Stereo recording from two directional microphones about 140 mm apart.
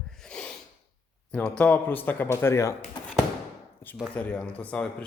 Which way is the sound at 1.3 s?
10° left (ahead or behind).